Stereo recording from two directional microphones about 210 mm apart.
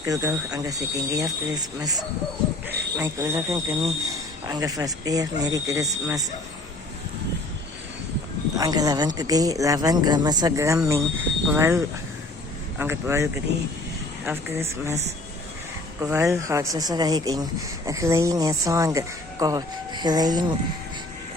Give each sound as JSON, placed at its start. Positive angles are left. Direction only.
{"t": 0.0, "sound": "speech", "side_deg": -15}
{"t": 8.5, "sound": "speech", "side_deg": -15}
{"t": 12.8, "sound": "speech", "side_deg": -10}
{"t": 14.3, "sound": "speech", "side_deg": -10}
{"t": 16.0, "sound": "speech", "side_deg": -15}